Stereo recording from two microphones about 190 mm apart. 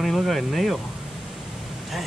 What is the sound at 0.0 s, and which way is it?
Speech, centre (ahead or behind).